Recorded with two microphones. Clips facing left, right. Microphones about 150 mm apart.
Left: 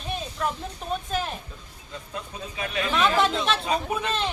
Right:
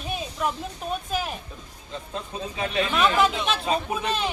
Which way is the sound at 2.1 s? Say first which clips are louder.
Right 3 dB; 25° right (ahead or behind).